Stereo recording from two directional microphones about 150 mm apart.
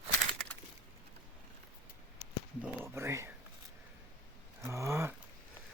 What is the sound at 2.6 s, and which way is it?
Speech, 15° right (ahead or behind).